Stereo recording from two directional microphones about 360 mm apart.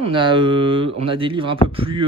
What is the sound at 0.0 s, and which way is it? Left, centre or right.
Speech, centre.